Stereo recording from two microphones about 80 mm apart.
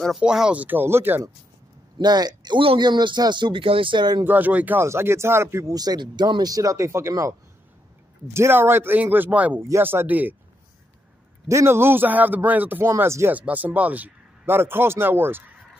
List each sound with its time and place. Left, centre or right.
0.2 s speech: centre
0.6 s a man's voice: right
2.0 s speech: right
4.2 s a man's voice: right
4.8 s speech: right
5.8 s a man's voice: right
9.6 s a man's voice: right
11.4 s a man's voice: right
13.3 s a man's voice: centre